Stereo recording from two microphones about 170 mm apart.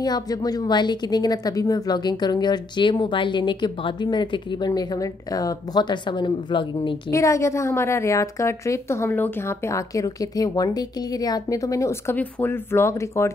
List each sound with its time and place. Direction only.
0.0 s a woman's voice: 25° left (ahead or behind)